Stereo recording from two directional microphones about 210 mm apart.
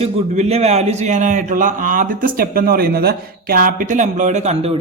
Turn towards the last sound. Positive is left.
turn(degrees=-30)  # may be behind; listen again after turning